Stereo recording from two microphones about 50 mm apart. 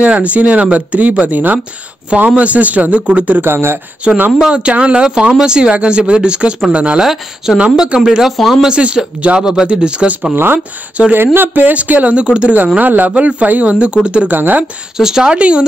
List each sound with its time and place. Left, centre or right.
0.0 s speech: right
3.3 s speech: right
4.4 s speech: centre
7.0 s speech: centre
8.3 s speech: centre
8.6 s speech: centre
9.4 s speech: centre
10.3 s speech: right
11.0 s speech: right
11.3 s speech: right
11.7 s speech: right
12.7 s speech: right
14.3 s speech: right
15.0 s speech: centre